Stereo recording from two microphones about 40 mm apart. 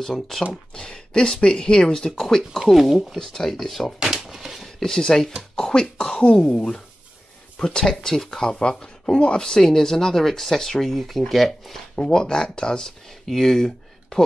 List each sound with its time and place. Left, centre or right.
0.0 s speech: centre
0.7 s speech: left
2.7 s speech: centre
3.2 s speech: centre
4.0 s a sound: centre
4.7 s speech: centre
8.4 s speech: centre
11.9 s speech: centre
13.3 s speech: centre